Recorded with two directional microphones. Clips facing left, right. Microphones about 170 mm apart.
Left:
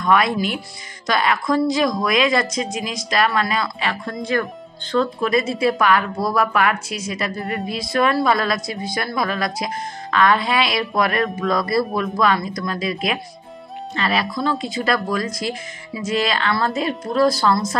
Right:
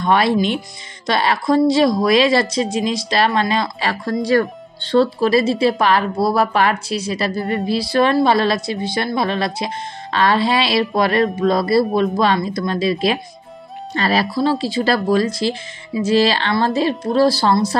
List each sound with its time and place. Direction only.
0.0 s a woman's voice: 30° right (ahead or behind)